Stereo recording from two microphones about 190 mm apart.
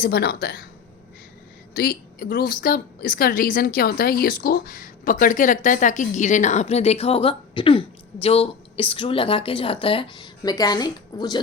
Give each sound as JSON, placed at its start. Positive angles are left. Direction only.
{"t": 0.0, "sound": "speech", "side_deg": 60}
{"t": 1.7, "sound": "a woman's voice", "side_deg": 55}